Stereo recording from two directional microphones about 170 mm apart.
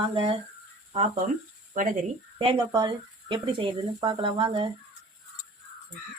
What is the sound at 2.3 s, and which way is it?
Speech, 30° right (ahead or behind).